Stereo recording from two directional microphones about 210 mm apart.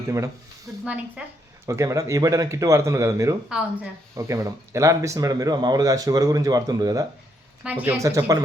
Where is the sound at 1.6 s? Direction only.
15° right (ahead or behind).